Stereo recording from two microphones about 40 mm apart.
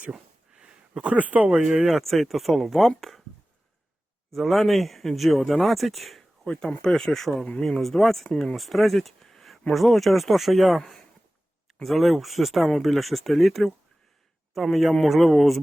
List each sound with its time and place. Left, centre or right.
0.7 s a sound: right
1.1 s speech: right
1.5 s speech: centre
1.8 s speech: centre
4.4 s speech: centre
6.8 s speech: centre